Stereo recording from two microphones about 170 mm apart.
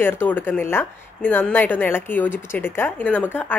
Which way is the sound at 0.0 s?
10° left (ahead or behind).